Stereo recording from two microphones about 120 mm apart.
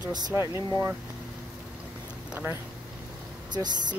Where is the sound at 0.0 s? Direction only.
35° right (ahead or behind).